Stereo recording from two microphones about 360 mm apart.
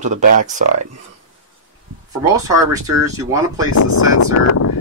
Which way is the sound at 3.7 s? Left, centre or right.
Left.